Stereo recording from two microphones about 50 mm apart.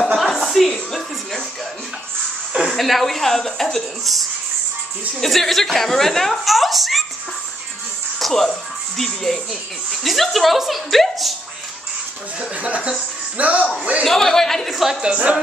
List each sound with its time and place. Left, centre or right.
0.2 s music: centre
2.6 s speech: centre
5.2 s speech: centre
8.2 s speech: centre
12.4 s speech: right
14.0 s a man's voice: centre
14.8 s a woman's voice: centre